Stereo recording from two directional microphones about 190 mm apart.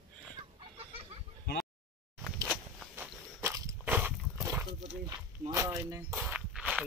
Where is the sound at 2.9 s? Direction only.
10° right (ahead or behind).